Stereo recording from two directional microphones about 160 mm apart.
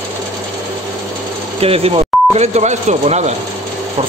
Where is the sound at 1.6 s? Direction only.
35° right (ahead or behind).